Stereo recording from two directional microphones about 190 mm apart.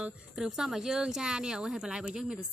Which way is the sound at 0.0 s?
5° right (ahead or behind).